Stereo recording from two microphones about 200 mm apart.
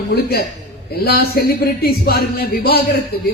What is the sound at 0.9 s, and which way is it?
Speech, 50° left (ahead or behind).